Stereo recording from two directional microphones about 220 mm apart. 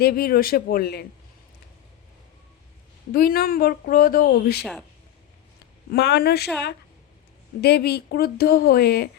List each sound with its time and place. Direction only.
0.0 s speech: 45° left (ahead or behind)
3.1 s speech: 45° left (ahead or behind)
5.9 s speech: 50° left (ahead or behind)
7.6 s speech: 45° left (ahead or behind)